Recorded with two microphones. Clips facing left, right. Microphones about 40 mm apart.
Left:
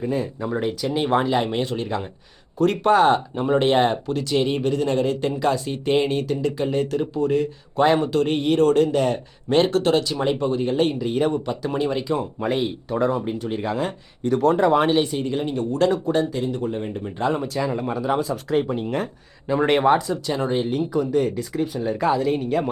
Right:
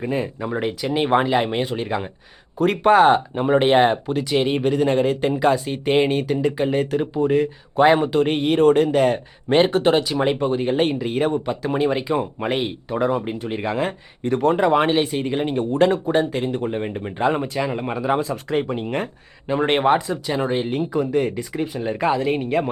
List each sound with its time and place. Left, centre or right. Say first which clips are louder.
0.0 s speech: right 1 dB; right
12.9 s speech: right 1 dB; centre
16.3 s speech: right 2 dB; right; by 19.0 s centre
19.5 s speech: even; right